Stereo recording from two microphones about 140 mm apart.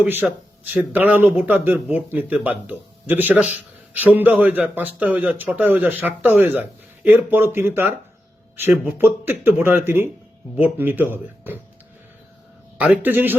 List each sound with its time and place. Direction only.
0.0 s a man's voice: 15° right (ahead or behind)
12.8 s a man's voice: 10° right (ahead or behind)